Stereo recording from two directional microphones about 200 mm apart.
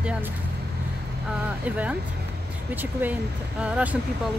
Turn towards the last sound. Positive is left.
turn(degrees=-5)  # may be behind; listen again after turning